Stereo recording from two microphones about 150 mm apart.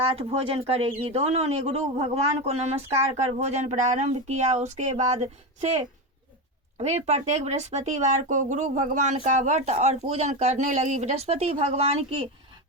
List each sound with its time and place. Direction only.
0.0 s speech: 40° right (ahead or behind)